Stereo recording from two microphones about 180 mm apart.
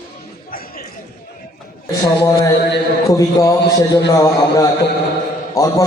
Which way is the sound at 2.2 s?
20° left (ahead or behind).